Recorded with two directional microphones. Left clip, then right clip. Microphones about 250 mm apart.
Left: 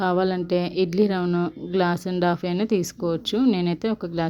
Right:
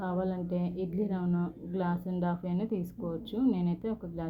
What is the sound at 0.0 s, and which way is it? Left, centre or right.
Speech, left.